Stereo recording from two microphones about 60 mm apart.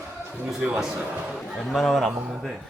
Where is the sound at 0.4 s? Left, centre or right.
Centre.